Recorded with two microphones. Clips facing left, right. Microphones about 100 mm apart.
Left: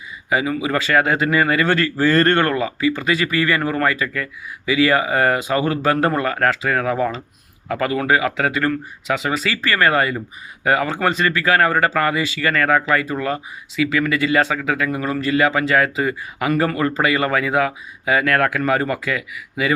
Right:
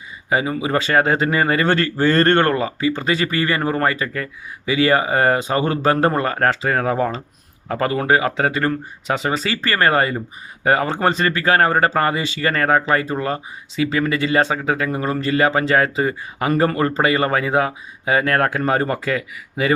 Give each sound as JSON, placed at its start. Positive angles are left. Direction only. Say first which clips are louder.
{"t": 0.3, "sound": "speech", "louder": "even", "side_deg": -35}